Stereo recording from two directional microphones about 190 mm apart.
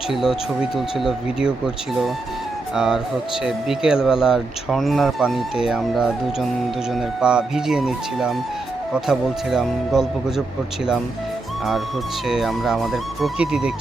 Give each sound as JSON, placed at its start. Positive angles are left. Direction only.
{"t": 0.1, "sound": "speech", "side_deg": 0}
{"t": 12.3, "sound": "speech", "side_deg": 0}